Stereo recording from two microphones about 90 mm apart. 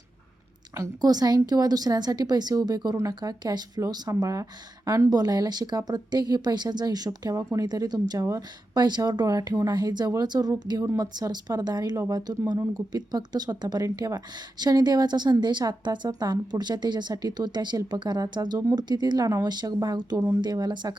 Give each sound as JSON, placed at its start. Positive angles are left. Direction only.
{"t": 0.8, "sound": "a woman's voice", "side_deg": -45}
{"t": 3.8, "sound": "a woman's voice", "side_deg": -40}